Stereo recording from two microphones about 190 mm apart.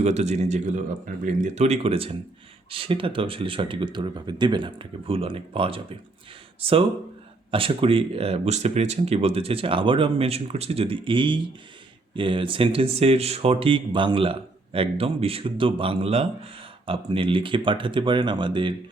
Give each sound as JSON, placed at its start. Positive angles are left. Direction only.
{"t": 0.0, "sound": "speech", "side_deg": -35}